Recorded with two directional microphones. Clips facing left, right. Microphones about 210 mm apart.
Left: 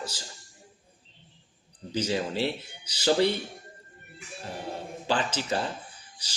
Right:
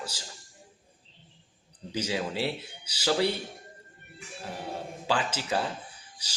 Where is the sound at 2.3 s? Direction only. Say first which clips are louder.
Left 2 dB; 10° right (ahead or behind).